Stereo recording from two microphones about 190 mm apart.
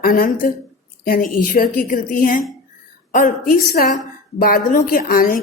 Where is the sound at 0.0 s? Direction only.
50° left (ahead or behind).